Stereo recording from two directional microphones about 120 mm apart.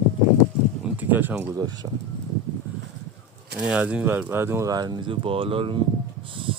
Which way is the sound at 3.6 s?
10° right (ahead or behind).